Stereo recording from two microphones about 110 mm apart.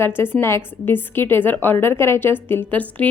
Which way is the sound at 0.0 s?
20° left (ahead or behind).